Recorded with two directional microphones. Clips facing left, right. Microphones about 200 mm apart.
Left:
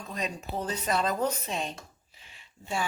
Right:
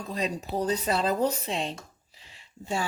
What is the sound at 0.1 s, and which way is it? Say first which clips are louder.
Speech: right 4 dB; 35° right (ahead or behind).